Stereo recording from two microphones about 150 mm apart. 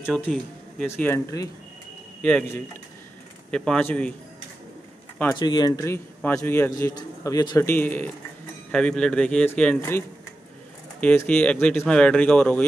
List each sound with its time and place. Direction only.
0.0 s speech: 5° left (ahead or behind)
0.8 s speech: 15° left (ahead or behind)
2.2 s speech: 10° left (ahead or behind)
5.4 s speech: 30° left (ahead or behind); by 6.7 s 15° left (ahead or behind)
6.7 s a man's voice: 25° left (ahead or behind); by 9.8 s 10° left (ahead or behind)
9.8 s a man's voice: 20° left (ahead or behind)